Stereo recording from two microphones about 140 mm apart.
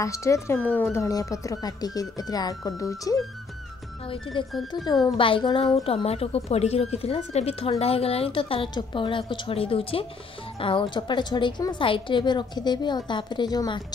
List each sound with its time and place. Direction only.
0.0 s speech: 20° left (ahead or behind)
0.9 s speech: 25° left (ahead or behind)
4.5 s speech: centre (ahead or behind)
5.0 s a woman's voice: 40° left (ahead or behind)